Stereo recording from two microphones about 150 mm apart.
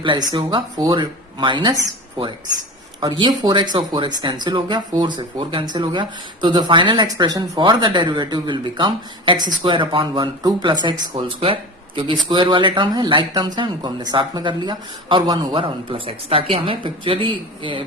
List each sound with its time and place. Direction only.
0.0 s speech: 30° right (ahead or behind)